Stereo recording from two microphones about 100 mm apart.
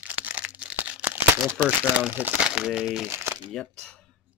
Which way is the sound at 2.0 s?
15° right (ahead or behind).